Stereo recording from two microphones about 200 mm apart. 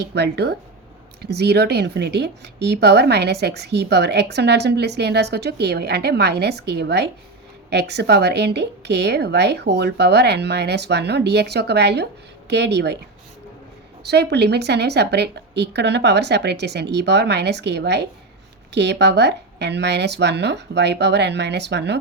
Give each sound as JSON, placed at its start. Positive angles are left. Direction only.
{"t": 0.0, "sound": "speech", "side_deg": -55}
{"t": 14.0, "sound": "speech", "side_deg": -55}